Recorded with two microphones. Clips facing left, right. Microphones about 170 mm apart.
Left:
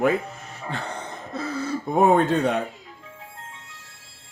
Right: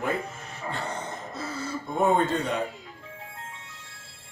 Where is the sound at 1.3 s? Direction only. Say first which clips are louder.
Left 8 dB; 60° left (ahead or behind).